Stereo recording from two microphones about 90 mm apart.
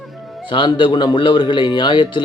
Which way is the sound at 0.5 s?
70° left (ahead or behind).